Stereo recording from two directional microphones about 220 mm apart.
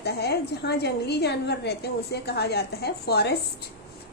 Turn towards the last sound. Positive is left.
turn(degrees=45)  # may be behind; listen again after turning